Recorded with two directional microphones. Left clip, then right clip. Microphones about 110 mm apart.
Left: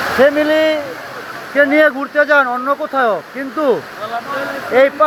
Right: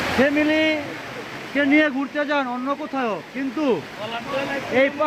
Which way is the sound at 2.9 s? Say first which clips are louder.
Left 12 dB; 5° right (ahead or behind).